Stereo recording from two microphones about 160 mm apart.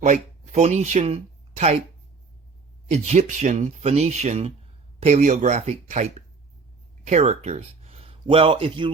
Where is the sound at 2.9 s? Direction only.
45° right (ahead or behind).